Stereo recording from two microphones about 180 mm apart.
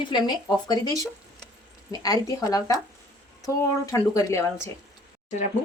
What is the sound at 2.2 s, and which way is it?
Speech, 20° left (ahead or behind).